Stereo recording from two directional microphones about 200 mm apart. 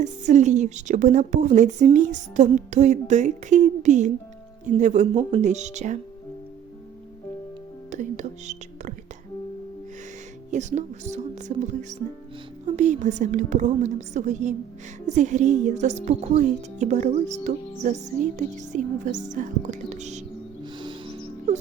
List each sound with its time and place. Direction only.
0.0 s a woman's voice: 35° right (ahead or behind)
7.9 s speech: 35° right (ahead or behind)
10.5 s a woman's voice: 35° right (ahead or behind)
20.7 s music: 25° right (ahead or behind)